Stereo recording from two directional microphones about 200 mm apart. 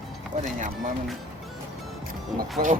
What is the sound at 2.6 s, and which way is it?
Speech, 45° right (ahead or behind).